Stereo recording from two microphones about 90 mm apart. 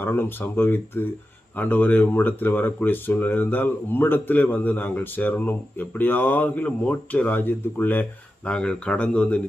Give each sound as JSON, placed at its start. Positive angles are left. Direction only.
{"t": 0.0, "sound": "speech", "side_deg": 25}
{"t": 8.4, "sound": "speech", "side_deg": 10}